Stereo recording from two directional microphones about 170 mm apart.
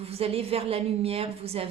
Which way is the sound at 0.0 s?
35° right (ahead or behind).